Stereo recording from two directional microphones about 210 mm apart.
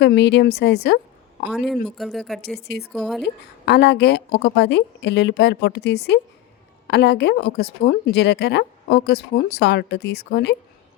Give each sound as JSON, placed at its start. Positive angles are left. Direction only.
{"t": 0.0, "sound": "speech", "side_deg": 55}
{"t": 1.5, "sound": "speech", "side_deg": -5}
{"t": 2.6, "sound": "speech", "side_deg": 50}
{"t": 2.9, "sound": "speech", "side_deg": 0}
{"t": 3.2, "sound": "speech", "side_deg": 55}